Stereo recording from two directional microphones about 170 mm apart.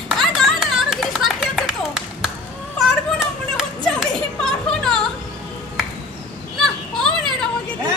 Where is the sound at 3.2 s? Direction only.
5° right (ahead or behind).